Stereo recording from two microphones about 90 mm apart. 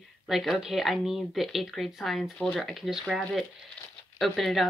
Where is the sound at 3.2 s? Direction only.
10° left (ahead or behind).